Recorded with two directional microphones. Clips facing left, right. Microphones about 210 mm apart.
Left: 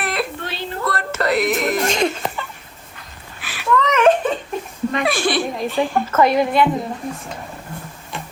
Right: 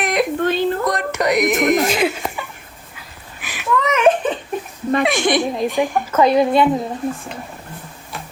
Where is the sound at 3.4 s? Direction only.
15° right (ahead or behind).